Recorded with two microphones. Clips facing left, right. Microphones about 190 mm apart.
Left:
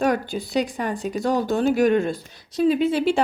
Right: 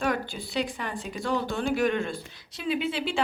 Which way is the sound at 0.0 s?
40° left (ahead or behind).